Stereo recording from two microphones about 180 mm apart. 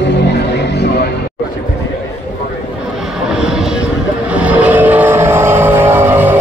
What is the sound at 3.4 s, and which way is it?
Vehicle, 5° right (ahead or behind).